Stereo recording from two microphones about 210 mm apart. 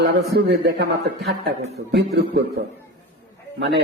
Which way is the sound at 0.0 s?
50° right (ahead or behind).